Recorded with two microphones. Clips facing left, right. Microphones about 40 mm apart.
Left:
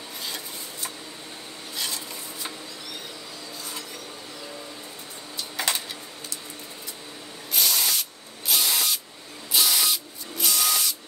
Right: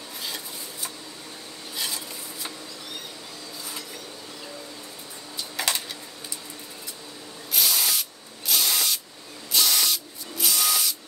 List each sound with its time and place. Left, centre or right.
7.5 s spray: centre